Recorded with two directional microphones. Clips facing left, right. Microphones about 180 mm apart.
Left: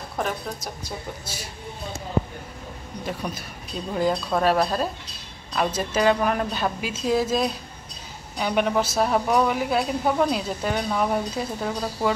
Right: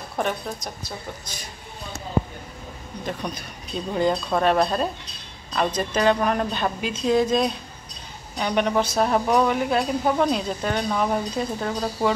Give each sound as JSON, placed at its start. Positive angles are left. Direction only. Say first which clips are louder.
{"t": 0.2, "sound": "speech", "louder": "right 2 dB", "side_deg": 0}
{"t": 3.1, "sound": "speech", "louder": "right 1 dB", "side_deg": 5}